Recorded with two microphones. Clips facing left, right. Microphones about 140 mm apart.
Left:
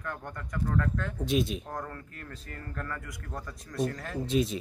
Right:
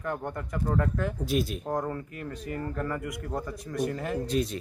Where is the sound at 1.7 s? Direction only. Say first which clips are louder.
Right 8 dB; 20° right (ahead or behind).